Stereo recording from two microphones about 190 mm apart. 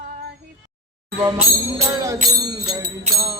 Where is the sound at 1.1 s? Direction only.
15° right (ahead or behind).